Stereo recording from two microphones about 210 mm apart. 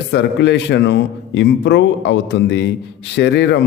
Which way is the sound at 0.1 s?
55° left (ahead or behind).